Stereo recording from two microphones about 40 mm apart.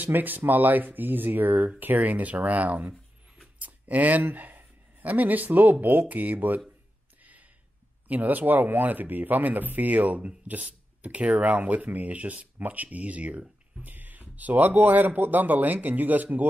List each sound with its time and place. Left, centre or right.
0.0 s speech: right
2.0 s speech: right
3.5 s a sound: right
4.3 s speech: right
8.1 s speech: right
13.8 s speech: right